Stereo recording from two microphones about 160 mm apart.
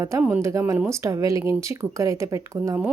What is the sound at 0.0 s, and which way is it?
Speech, 15° right (ahead or behind).